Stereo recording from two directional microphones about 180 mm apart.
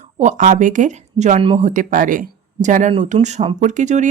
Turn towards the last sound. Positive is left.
turn(degrees=-40)  # may be behind; listen again after turning